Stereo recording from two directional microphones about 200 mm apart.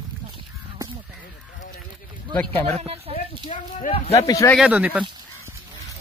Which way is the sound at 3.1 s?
35° left (ahead or behind).